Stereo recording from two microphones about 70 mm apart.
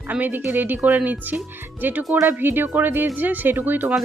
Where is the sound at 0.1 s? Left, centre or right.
Right.